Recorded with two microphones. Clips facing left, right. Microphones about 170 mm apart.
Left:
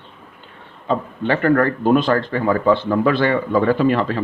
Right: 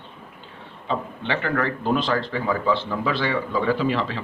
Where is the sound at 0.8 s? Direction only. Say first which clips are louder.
Left 7 dB; 45° left (ahead or behind).